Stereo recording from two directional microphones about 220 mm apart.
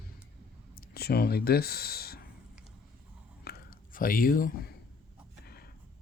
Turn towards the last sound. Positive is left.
turn(degrees=45)  # may be behind; listen again after turning